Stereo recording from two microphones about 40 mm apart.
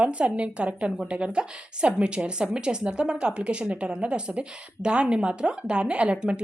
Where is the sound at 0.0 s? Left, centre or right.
Right.